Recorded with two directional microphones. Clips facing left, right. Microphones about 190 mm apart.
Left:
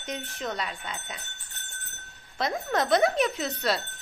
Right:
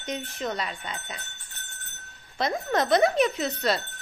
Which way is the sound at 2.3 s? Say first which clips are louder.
Right 2 dB; centre (ahead or behind).